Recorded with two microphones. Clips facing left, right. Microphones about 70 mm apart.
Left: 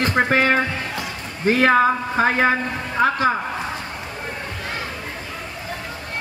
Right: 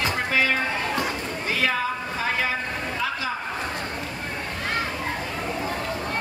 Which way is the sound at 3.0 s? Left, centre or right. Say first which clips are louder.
Left 11 dB; left.